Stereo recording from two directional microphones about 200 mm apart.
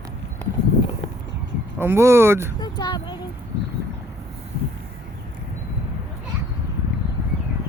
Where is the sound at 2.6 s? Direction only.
20° left (ahead or behind).